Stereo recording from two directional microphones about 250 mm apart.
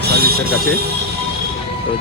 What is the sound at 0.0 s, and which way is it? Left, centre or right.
Music, right.